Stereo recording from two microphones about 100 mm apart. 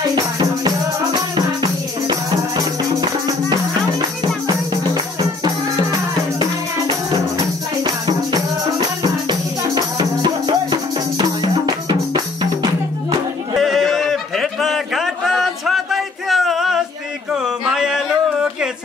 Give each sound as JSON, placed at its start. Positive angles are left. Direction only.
{"t": 0.1, "sound": "music", "side_deg": -45}
{"t": 7.8, "sound": "music", "side_deg": -40}
{"t": 13.6, "sound": "a sound", "side_deg": 0}